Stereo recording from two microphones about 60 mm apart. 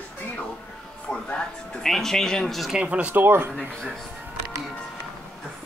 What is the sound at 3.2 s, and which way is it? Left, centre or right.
Speech, right.